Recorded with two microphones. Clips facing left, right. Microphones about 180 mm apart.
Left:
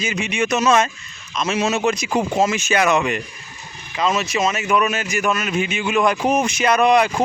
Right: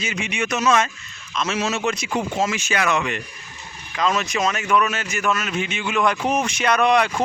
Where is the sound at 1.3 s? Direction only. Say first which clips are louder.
Left 3 dB; 10° left (ahead or behind).